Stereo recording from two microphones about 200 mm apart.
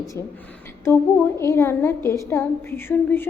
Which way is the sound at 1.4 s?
15° left (ahead or behind).